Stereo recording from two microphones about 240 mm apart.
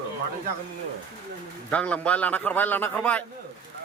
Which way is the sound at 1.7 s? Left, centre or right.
Centre.